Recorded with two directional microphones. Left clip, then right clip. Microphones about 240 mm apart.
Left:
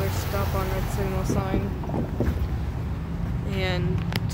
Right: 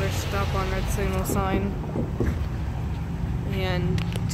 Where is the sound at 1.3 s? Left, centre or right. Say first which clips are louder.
Right 3 dB; centre.